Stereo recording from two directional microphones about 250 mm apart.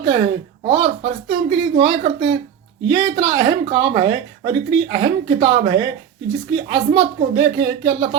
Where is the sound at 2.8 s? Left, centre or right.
Centre.